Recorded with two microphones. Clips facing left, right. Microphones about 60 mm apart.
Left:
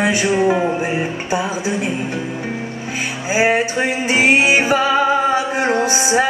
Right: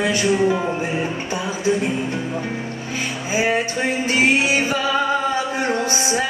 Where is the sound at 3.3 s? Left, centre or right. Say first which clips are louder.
Left 4 dB; left.